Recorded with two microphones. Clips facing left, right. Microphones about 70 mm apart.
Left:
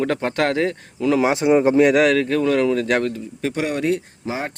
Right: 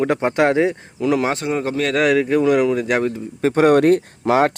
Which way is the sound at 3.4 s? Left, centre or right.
Right.